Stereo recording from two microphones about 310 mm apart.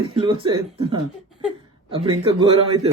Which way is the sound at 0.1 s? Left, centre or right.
Centre.